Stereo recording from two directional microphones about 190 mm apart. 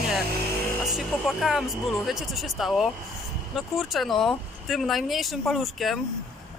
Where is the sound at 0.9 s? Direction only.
Centre (ahead or behind).